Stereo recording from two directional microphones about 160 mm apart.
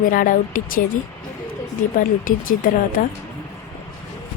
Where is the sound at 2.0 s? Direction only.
60° left (ahead or behind).